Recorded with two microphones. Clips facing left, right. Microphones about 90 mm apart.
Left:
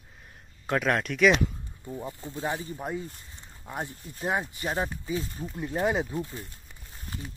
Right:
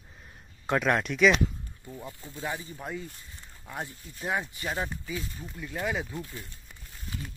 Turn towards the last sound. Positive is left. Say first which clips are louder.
# left 5 dB
turn(degrees=25)  # may be behind; listen again after turning